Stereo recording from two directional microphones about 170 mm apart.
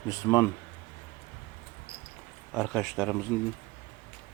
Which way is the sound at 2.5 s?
5° left (ahead or behind).